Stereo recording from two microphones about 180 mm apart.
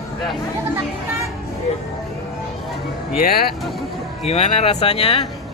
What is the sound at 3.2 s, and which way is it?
Speech, 55° left (ahead or behind).